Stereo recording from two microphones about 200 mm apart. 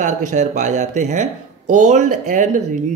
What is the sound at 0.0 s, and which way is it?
A man's voice, 40° right (ahead or behind).